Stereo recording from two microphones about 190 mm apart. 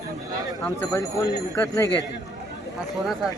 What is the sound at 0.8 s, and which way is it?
Speech, 15° left (ahead or behind).